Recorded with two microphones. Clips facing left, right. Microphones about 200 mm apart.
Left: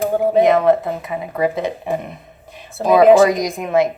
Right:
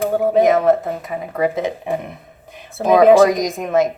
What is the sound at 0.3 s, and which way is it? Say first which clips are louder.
A woman's voice: left 1 dB; 45° right (ahead or behind).